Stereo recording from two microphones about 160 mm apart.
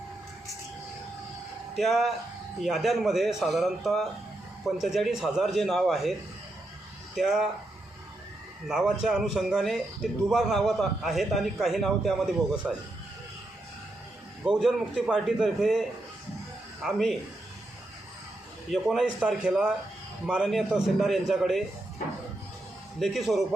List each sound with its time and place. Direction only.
1.7 s speech: centre (ahead or behind)
7.2 s speech: centre (ahead or behind)
8.6 s speech: 5° right (ahead or behind)
14.4 s speech: centre (ahead or behind)
18.7 s speech: centre (ahead or behind)
23.0 s speech: centre (ahead or behind)